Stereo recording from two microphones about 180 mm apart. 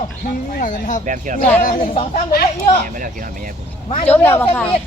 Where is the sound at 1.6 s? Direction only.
45° left (ahead or behind).